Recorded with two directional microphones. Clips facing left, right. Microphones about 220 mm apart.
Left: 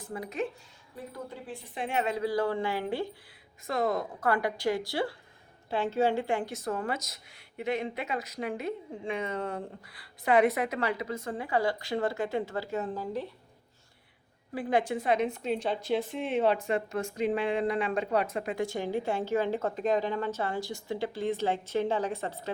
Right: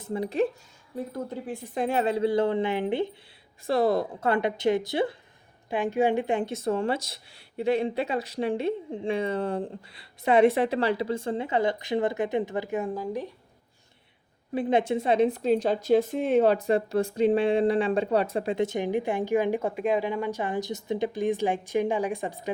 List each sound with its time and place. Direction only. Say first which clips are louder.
0.0 s speech: right 8 dB; 25° right (ahead or behind)
1.1 s a woman's voice: right 4 dB; 45° right (ahead or behind); by 3.1 s 20° right (ahead or behind)
3.7 s a woman's voice: right 6 dB; 35° right (ahead or behind); by 13.2 s 10° right (ahead or behind)
14.5 s a woman's voice: right 4 dB; 25° right (ahead or behind)